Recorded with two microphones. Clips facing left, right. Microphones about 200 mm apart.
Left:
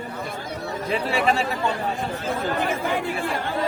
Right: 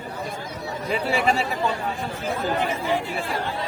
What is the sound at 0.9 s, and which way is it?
Speech, centre (ahead or behind).